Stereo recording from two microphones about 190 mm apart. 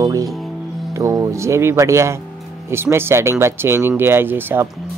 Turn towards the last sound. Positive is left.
turn(degrees=-10)  # may be behind; listen again after turning